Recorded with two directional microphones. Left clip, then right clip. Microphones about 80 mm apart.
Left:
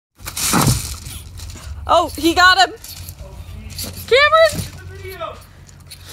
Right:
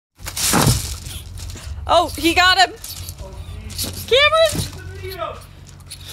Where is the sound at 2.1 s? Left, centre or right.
Centre.